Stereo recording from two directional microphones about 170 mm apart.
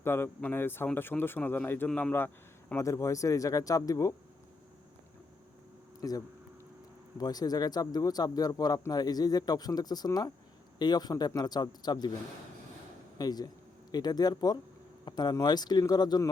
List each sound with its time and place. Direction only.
0.0 s speech: 15° left (ahead or behind)
6.0 s speech: 20° left (ahead or behind)
13.1 s speech: 25° left (ahead or behind)